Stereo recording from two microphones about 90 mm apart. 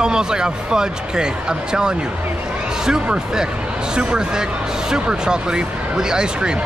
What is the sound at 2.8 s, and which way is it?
Speech, 5° right (ahead or behind).